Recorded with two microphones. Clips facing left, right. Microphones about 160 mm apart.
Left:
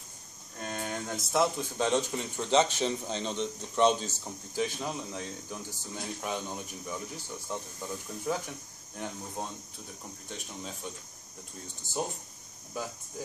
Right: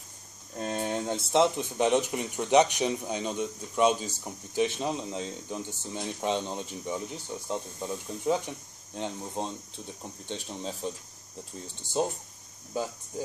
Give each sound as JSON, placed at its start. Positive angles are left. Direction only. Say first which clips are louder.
{"t": 0.6, "sound": "speech", "louder": "right 6 dB", "side_deg": -30}